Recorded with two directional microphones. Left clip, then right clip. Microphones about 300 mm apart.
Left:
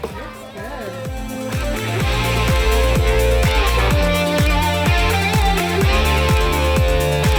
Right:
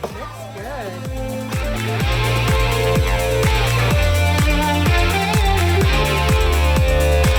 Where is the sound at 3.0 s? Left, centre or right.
Centre.